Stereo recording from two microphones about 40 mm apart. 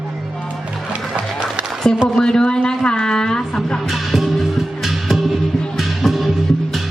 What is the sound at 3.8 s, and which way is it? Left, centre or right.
Music, centre.